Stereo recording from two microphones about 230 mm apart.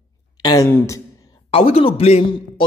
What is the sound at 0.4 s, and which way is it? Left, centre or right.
Speech, centre.